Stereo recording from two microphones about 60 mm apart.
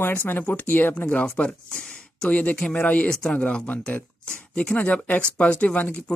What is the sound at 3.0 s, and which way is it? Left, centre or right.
Speech, centre.